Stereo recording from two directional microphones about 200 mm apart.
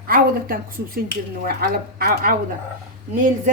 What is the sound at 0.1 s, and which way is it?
A woman's voice, 45° right (ahead or behind).